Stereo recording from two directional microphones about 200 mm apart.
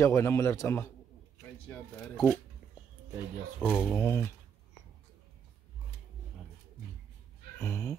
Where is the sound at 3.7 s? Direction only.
10° left (ahead or behind).